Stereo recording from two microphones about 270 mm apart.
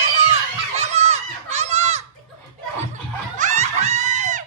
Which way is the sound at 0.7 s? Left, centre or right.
Right.